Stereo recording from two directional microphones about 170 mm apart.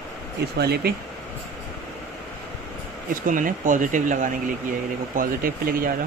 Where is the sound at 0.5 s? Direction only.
70° right (ahead or behind).